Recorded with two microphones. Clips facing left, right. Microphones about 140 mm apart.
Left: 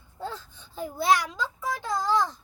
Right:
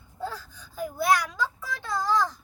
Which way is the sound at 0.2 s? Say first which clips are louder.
Right 1 dB; 25° left (ahead or behind).